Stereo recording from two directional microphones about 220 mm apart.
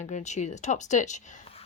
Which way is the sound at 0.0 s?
30° left (ahead or behind).